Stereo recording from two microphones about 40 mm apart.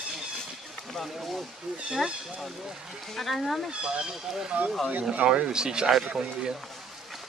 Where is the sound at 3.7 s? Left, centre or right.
Right.